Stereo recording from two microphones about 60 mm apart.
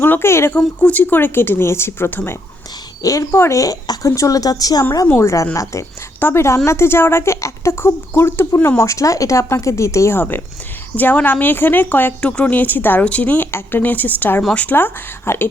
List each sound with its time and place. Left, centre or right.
0.0 s speech: left
0.3 s speech: left
0.5 s speech: left
2.0 s speech: left
3.0 s a woman's voice: left
3.3 s speech: left
3.6 s speech: left
5.1 s speech: left
8.8 s speech: left
10.2 s speech: left
12.2 s speech: centre
12.5 s speech: left